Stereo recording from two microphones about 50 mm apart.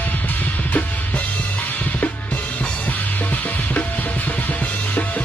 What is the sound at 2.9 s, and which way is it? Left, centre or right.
Music, left.